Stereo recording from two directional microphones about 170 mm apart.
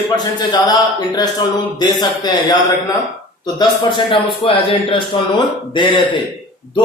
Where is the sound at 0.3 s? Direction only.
25° left (ahead or behind).